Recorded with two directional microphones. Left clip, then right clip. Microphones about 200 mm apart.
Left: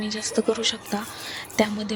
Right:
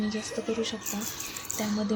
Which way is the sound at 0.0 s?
45° left (ahead or behind).